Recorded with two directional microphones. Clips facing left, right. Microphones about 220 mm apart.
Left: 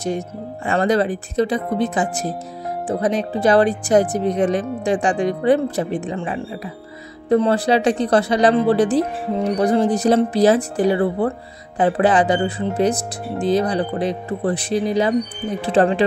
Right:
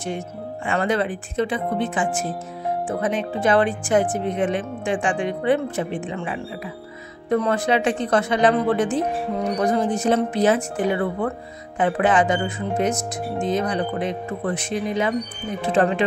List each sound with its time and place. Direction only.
0.7 s speech: 40° left (ahead or behind)